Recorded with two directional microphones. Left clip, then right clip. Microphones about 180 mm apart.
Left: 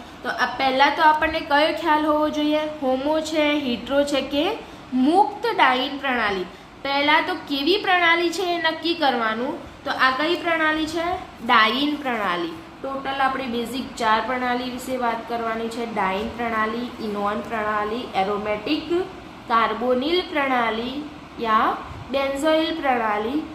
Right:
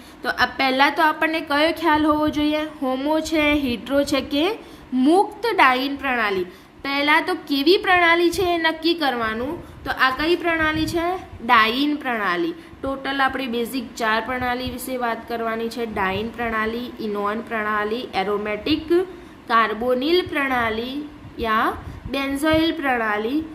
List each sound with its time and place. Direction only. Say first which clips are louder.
0.3 s a woman's voice: right 2 dB; 70° right (ahead or behind)
13.0 s a woman's voice: even; 65° right (ahead or behind)